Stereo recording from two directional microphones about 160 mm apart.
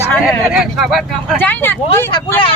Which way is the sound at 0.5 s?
Centre (ahead or behind).